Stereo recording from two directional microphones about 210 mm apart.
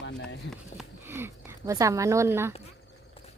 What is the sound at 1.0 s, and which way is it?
Speech, 10° right (ahead or behind).